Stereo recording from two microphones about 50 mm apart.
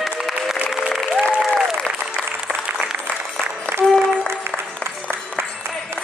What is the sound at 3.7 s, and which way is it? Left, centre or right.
Music, right.